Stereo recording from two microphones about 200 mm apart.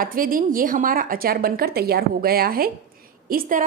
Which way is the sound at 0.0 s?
45° right (ahead or behind).